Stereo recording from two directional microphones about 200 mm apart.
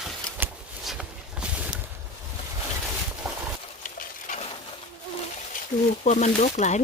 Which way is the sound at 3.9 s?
40° left (ahead or behind).